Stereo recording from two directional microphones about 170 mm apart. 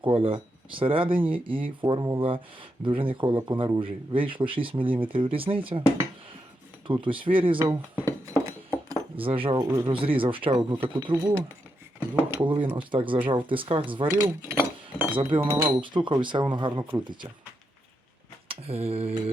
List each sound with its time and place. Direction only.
0.0 s speech: 30° right (ahead or behind)
6.8 s speech: 30° right (ahead or behind)
7.6 s speech: 15° right (ahead or behind)
8.4 s a sound: 15° right (ahead or behind)
9.1 s speech: 30° right (ahead or behind)
11.2 s speech: 15° right (ahead or behind)
12.4 s speech: 30° right (ahead or behind)
14.5 s chink: 10° right (ahead or behind)
15.4 s speech: 10° right (ahead or behind)
15.8 s speech: 30° right (ahead or behind)
18.4 s speech: 35° right (ahead or behind)